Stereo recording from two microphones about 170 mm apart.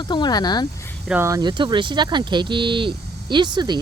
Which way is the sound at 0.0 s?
25° left (ahead or behind).